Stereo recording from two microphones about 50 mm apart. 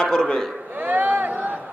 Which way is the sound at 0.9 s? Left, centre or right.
Right.